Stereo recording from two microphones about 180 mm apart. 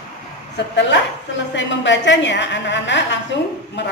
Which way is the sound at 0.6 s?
75° left (ahead or behind).